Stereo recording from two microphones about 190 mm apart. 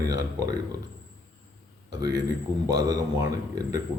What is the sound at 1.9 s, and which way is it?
Speech, 20° right (ahead or behind).